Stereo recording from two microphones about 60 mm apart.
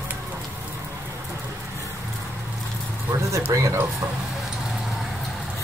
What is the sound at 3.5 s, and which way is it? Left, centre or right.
Speech, right.